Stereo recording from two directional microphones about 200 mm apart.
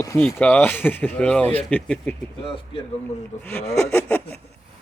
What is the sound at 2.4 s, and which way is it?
Speech, 25° left (ahead or behind).